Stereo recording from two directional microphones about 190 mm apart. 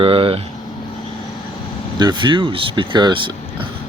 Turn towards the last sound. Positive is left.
turn(degrees=-25)  # may be behind; listen again after turning